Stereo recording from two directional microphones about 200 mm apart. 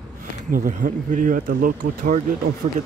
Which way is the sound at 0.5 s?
45° right (ahead or behind).